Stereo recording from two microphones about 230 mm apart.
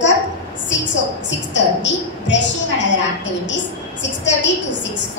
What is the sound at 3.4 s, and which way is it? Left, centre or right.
A woman's voice, left.